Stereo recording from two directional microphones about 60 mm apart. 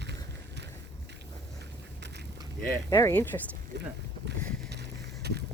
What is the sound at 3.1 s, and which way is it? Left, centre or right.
Speech, left.